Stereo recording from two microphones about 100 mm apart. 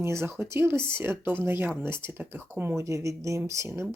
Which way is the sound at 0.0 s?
25° right (ahead or behind).